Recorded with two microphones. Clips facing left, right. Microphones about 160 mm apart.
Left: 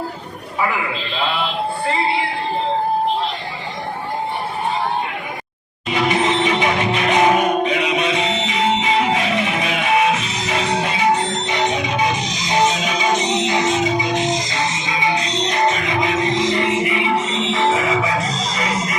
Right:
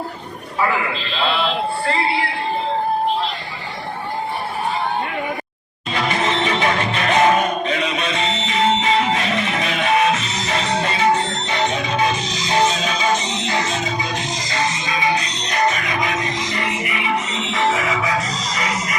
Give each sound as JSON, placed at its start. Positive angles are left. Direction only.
{"t": 5.9, "sound": "music", "side_deg": 15}